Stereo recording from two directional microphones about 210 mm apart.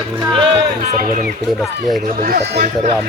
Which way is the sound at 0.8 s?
35° right (ahead or behind).